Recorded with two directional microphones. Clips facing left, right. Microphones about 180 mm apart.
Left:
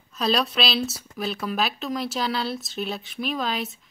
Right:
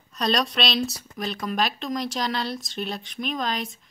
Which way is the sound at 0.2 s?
5° left (ahead or behind).